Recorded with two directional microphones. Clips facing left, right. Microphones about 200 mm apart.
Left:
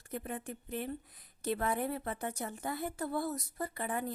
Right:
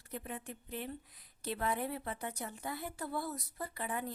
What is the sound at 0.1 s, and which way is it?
Speech, 45° left (ahead or behind).